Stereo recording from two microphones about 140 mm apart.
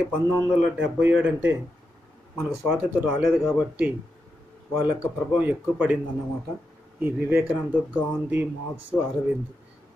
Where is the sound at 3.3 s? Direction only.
5° right (ahead or behind).